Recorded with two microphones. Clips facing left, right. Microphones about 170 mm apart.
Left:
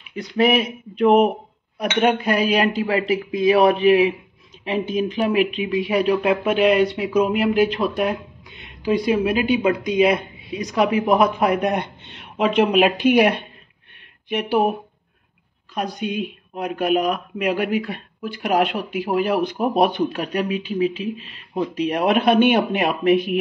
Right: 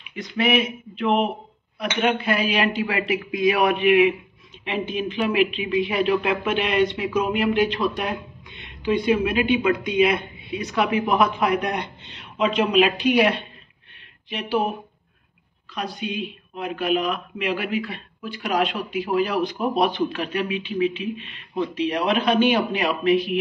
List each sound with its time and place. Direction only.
0.1 s a woman's voice: 40° left (ahead or behind)